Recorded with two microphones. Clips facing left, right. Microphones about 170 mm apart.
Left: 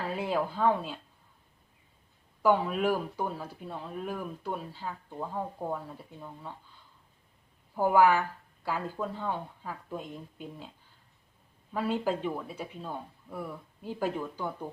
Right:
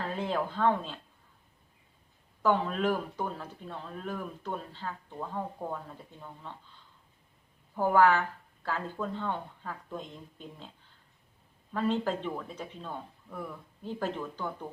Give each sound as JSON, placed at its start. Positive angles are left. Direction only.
{"t": 0.1, "sound": "speech", "side_deg": 10}
{"t": 2.4, "sound": "speech", "side_deg": 10}
{"t": 7.8, "sound": "speech", "side_deg": 10}
{"t": 11.7, "sound": "speech", "side_deg": 10}